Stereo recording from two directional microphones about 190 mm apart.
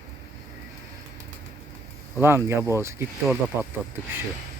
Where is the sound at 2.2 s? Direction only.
10° right (ahead or behind).